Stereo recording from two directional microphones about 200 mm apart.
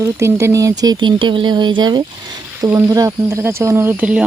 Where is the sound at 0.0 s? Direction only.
15° right (ahead or behind).